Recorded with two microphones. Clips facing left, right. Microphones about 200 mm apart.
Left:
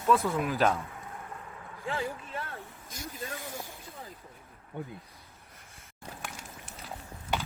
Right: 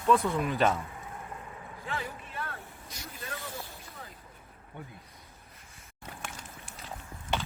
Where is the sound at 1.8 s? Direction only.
30° left (ahead or behind).